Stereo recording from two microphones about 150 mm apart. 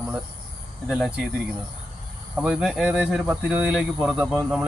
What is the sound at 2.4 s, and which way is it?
Speech, 5° right (ahead or behind).